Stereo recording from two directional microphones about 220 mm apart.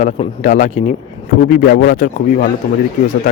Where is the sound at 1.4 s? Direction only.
45° left (ahead or behind).